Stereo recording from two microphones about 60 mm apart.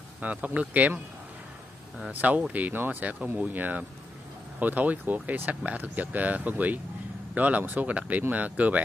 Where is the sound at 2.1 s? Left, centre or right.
Right.